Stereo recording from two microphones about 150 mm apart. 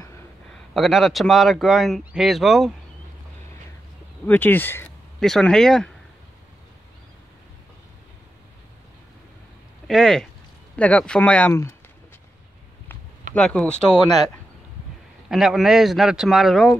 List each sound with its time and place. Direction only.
0.7 s speech: centre (ahead or behind)
4.3 s speech: 15° left (ahead or behind)
5.2 s speech: 5° left (ahead or behind)
9.8 s speech: 5° left (ahead or behind)
13.3 s speech: 10° left (ahead or behind)
15.2 s speech: centre (ahead or behind)